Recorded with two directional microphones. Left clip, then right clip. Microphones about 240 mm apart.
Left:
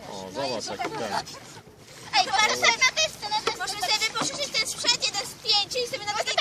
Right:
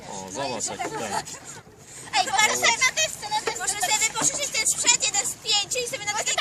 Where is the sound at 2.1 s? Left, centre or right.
Centre.